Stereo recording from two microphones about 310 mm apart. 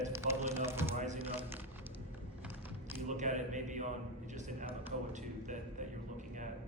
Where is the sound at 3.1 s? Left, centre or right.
Right.